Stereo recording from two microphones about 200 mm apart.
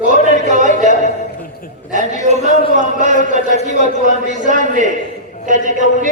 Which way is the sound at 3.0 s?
35° right (ahead or behind).